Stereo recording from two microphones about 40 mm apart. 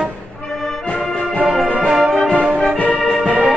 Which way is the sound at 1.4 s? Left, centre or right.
Centre.